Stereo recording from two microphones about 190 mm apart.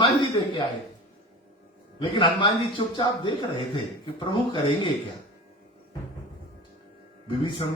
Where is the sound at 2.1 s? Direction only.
25° left (ahead or behind).